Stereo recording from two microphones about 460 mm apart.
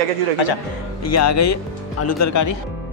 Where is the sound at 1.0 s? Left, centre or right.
Left.